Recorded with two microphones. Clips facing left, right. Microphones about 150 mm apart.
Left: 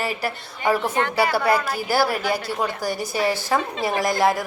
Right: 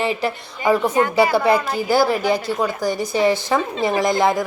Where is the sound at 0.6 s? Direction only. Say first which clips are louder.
Right 4 dB; 10° right (ahead or behind).